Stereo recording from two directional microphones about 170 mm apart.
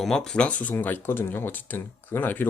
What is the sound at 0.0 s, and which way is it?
Speech, 5° left (ahead or behind).